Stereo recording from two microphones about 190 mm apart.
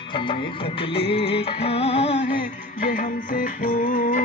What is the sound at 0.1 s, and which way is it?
Music, 25° left (ahead or behind).